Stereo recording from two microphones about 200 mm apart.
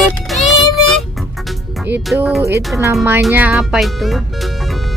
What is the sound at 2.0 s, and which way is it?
Speech, 5° right (ahead or behind).